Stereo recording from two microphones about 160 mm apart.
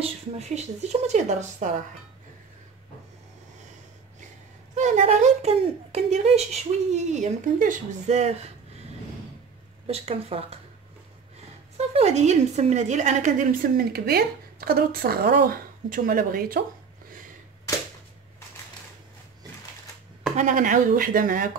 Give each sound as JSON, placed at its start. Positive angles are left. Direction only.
{"t": 0.0, "sound": "speech", "side_deg": -45}
{"t": 4.7, "sound": "speech", "side_deg": -50}
{"t": 9.8, "sound": "a woman's voice", "side_deg": -40}
{"t": 11.7, "sound": "a woman's voice", "side_deg": -40}
{"t": 20.3, "sound": "a woman's voice", "side_deg": -55}